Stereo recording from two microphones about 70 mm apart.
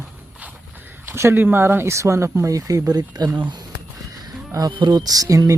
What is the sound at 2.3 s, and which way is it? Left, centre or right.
Speech, right.